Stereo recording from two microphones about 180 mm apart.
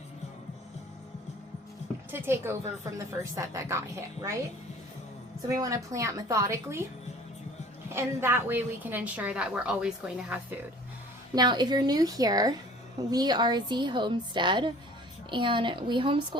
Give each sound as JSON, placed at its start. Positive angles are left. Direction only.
{"t": 2.0, "sound": "a woman's voice", "side_deg": -15}
{"t": 5.5, "sound": "a woman's voice", "side_deg": -20}
{"t": 7.9, "sound": "a woman's voice", "side_deg": -15}
{"t": 11.3, "sound": "a woman's voice", "side_deg": -25}